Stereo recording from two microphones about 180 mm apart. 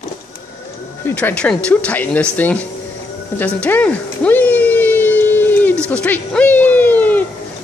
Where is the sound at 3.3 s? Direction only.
10° left (ahead or behind).